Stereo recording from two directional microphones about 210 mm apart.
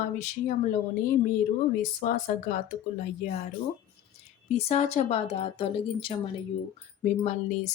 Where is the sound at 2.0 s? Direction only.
40° left (ahead or behind).